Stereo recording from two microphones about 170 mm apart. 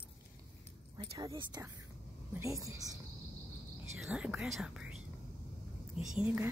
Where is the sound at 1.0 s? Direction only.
25° right (ahead or behind).